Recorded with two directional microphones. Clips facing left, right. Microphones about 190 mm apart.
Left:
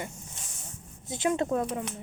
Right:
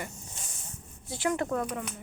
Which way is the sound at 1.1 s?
20° left (ahead or behind).